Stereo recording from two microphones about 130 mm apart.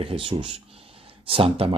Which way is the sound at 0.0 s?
45° right (ahead or behind).